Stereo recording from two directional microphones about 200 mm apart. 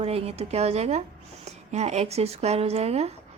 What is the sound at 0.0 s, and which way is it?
A woman's voice, 30° right (ahead or behind).